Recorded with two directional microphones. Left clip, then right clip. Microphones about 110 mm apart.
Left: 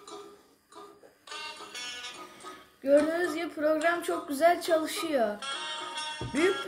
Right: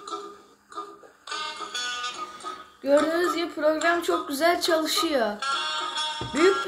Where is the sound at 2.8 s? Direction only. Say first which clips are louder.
Right 3 dB; 35° right (ahead or behind).